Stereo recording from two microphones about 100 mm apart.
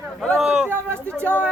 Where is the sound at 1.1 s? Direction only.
15° left (ahead or behind).